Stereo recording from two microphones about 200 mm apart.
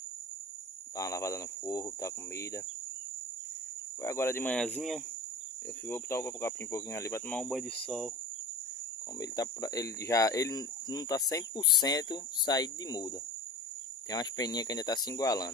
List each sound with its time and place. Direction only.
0.9 s speech: 15° left (ahead or behind)
4.0 s speech: 15° left (ahead or behind)
4.7 s cricket: centre (ahead or behind)
5.9 s speech: 10° left (ahead or behind)
9.2 s speech: 20° left (ahead or behind)
14.1 s speech: 20° left (ahead or behind)